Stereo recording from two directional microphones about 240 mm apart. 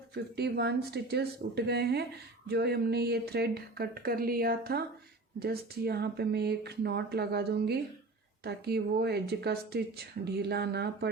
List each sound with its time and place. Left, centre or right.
0.1 s speech: right